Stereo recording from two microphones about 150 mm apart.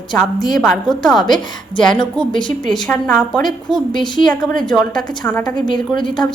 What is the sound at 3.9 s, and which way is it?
Speech, 30° left (ahead or behind).